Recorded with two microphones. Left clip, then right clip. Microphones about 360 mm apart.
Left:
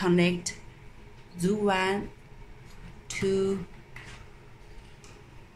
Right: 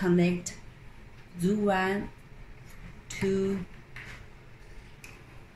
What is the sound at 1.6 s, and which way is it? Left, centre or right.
Speech, left.